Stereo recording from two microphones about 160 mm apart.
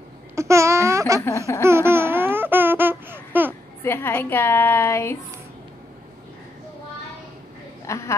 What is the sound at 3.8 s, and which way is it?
A woman's voice, 15° left (ahead or behind).